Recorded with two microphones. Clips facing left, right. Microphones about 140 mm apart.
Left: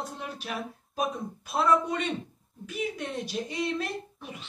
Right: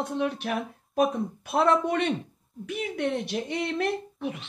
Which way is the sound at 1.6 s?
65° right (ahead or behind).